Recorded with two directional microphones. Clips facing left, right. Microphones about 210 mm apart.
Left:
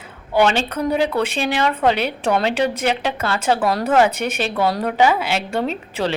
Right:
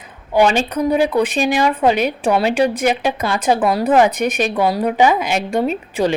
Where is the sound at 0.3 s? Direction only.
15° right (ahead or behind).